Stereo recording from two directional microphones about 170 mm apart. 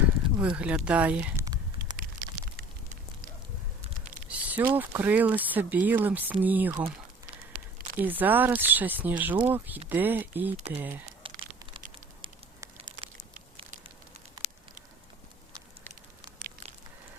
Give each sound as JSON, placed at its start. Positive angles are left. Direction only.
{"t": 0.3, "sound": "speech", "side_deg": -5}
{"t": 2.0, "sound": "a sound", "side_deg": -60}
{"t": 4.3, "sound": "speech", "side_deg": -10}
{"t": 7.9, "sound": "speech", "side_deg": -10}
{"t": 11.2, "sound": "crumpling", "side_deg": -30}
{"t": 12.2, "sound": "fire", "side_deg": -30}